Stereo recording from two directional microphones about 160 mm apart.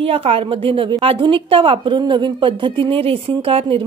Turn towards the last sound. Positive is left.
turn(degrees=-35)  # may be behind; listen again after turning